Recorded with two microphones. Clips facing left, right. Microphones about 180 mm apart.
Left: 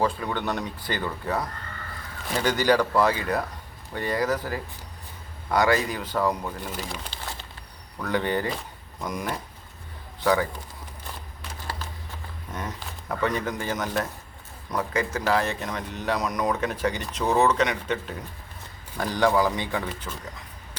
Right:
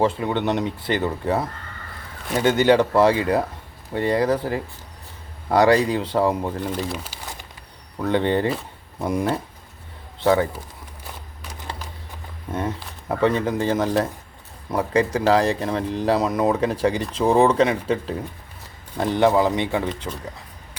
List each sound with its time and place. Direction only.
0.0 s speech: 25° right (ahead or behind)
6.8 s speech: 5° right (ahead or behind)
7.9 s speech: 25° right (ahead or behind)
12.5 s speech: 30° right (ahead or behind)